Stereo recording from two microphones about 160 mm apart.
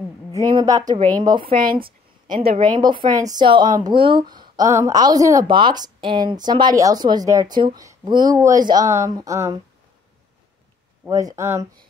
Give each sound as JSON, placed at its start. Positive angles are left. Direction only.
{"t": 0.3, "sound": "speech", "side_deg": -25}
{"t": 2.6, "sound": "speech", "side_deg": -30}
{"t": 4.6, "sound": "speech", "side_deg": -20}
{"t": 11.1, "sound": "speech", "side_deg": -20}